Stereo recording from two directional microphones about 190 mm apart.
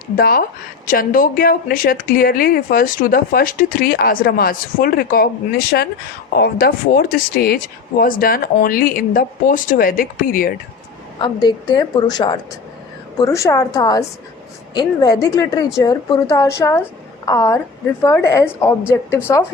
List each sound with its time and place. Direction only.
0.2 s a woman's voice: 50° left (ahead or behind)
11.2 s a woman's voice: 25° left (ahead or behind)